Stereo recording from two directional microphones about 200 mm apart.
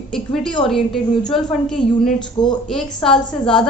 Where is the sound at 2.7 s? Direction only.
Centre (ahead or behind).